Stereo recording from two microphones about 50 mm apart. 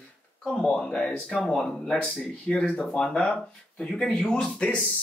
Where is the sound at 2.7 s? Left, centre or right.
Centre.